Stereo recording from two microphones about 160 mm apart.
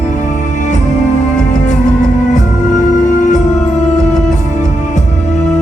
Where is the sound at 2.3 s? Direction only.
50° left (ahead or behind).